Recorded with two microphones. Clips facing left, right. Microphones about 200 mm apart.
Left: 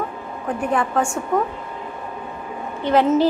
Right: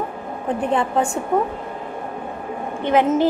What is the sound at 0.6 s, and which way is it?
Speech, 25° right (ahead or behind).